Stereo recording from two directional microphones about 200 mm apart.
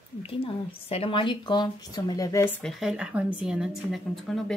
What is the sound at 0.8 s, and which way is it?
A woman's voice, 30° left (ahead or behind).